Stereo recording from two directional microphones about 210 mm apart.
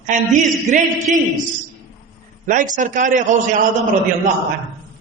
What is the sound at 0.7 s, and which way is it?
Speech, 35° right (ahead or behind).